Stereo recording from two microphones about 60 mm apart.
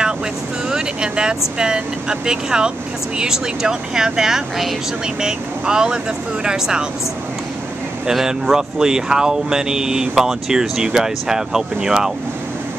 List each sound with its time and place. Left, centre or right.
0.7 s vehicle: centre
1.6 s speech: centre
8.1 s speech: centre